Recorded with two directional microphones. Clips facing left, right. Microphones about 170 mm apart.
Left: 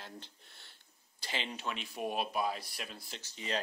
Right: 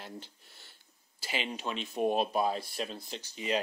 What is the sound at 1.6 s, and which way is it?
Speech, 25° right (ahead or behind).